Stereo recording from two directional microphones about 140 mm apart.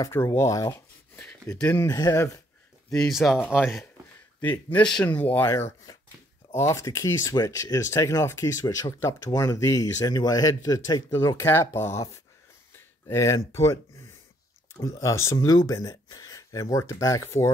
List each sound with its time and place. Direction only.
0.0 s speech: 20° left (ahead or behind)
1.8 s speech: 25° left (ahead or behind)
2.9 s speech: centre (ahead or behind)
3.3 s speech: 15° left (ahead or behind)
14.8 s speech: 20° left (ahead or behind)